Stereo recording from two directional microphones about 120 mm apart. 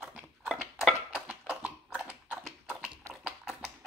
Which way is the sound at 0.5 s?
Centre (ahead or behind).